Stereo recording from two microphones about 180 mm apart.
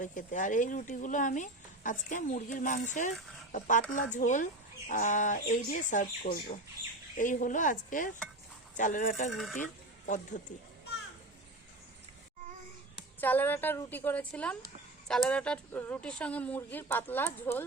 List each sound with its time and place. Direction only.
0.0 s speech: 45° left (ahead or behind)
10.3 s a child's voice: 40° left (ahead or behind)
13.1 s speech: 10° left (ahead or behind)